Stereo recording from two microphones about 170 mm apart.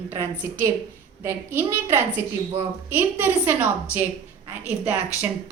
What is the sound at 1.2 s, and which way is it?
A woman's voice, 15° right (ahead or behind).